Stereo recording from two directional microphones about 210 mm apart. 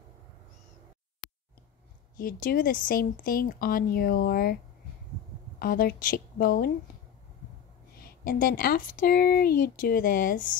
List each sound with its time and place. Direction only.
2.1 s speech: 40° left (ahead or behind)
5.6 s speech: 45° left (ahead or behind)
8.0 s speech: 45° left (ahead or behind)